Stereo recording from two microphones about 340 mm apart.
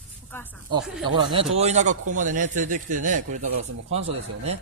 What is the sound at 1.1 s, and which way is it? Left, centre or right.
A man's voice, centre.